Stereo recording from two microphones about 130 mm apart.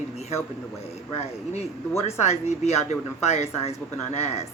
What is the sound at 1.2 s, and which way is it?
Speech, 55° left (ahead or behind).